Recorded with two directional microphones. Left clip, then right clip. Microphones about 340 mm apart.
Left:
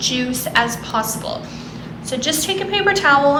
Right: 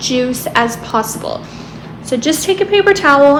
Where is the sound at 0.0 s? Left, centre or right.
Centre.